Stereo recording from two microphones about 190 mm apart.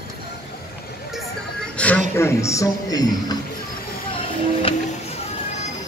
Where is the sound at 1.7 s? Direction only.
5° left (ahead or behind).